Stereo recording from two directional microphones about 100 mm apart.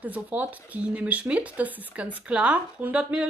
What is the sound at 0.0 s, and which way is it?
Speech, 15° right (ahead or behind).